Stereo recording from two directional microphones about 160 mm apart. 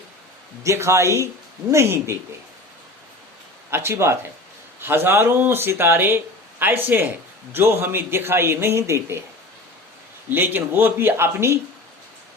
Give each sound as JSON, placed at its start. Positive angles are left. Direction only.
{"t": 0.6, "sound": "speech", "side_deg": -20}
{"t": 3.7, "sound": "speech", "side_deg": -15}
{"t": 10.2, "sound": "speech", "side_deg": -10}